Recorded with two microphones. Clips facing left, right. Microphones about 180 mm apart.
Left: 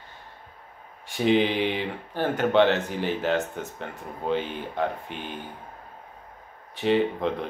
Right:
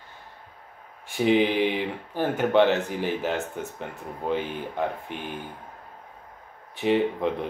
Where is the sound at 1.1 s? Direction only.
15° right (ahead or behind).